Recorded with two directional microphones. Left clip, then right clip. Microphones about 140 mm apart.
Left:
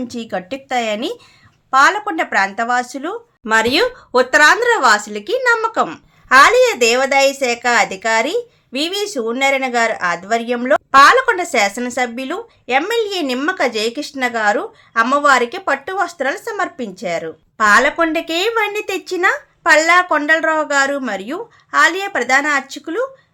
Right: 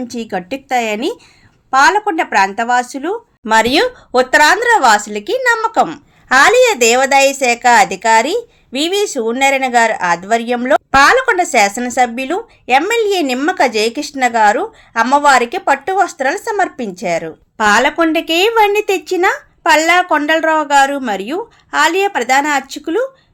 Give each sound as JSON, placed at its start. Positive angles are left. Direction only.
{"t": 0.0, "sound": "speech", "side_deg": -10}